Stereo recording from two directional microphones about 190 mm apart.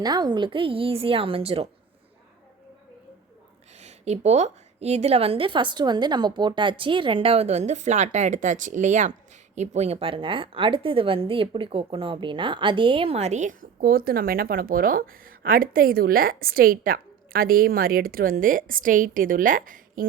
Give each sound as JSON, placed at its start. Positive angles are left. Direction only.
{"t": 0.0, "sound": "a woman's voice", "side_deg": -20}
{"t": 3.8, "sound": "a woman's voice", "side_deg": -35}